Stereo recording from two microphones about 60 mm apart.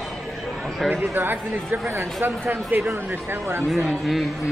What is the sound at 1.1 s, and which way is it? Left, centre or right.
Speech, right.